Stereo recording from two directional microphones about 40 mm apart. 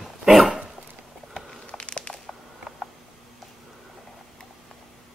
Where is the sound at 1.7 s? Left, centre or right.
Left.